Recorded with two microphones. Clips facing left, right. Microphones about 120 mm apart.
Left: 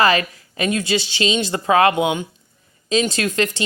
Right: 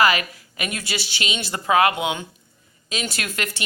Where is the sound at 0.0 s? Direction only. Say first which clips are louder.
Left 3 dB; 30° left (ahead or behind).